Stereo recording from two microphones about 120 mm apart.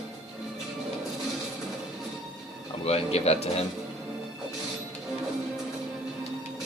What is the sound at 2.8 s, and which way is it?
Speech, 60° left (ahead or behind).